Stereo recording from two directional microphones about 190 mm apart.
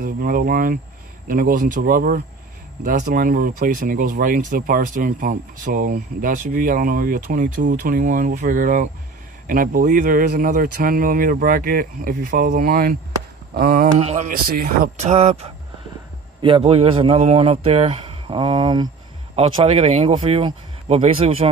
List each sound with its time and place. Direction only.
0.0 s speech: 50° right (ahead or behind)
13.9 s a man's voice: 40° right (ahead or behind)